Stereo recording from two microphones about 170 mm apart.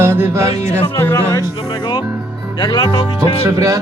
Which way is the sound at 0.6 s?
40° left (ahead or behind).